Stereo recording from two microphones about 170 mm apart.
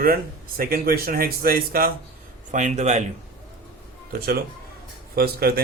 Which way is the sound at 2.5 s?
45° right (ahead or behind).